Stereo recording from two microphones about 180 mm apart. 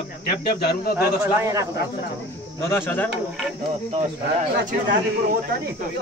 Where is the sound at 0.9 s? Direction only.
15° right (ahead or behind).